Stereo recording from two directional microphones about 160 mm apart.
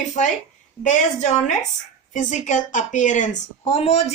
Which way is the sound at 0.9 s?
50° left (ahead or behind).